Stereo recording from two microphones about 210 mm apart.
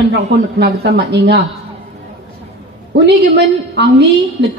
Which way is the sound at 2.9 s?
55° right (ahead or behind).